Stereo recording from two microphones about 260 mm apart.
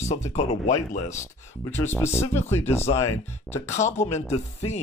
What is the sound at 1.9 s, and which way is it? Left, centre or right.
Speech, centre.